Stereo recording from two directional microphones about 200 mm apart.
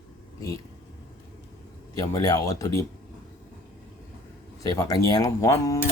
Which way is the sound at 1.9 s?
15° left (ahead or behind).